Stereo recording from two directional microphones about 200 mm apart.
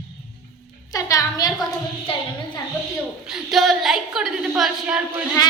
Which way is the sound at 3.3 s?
Centre (ahead or behind).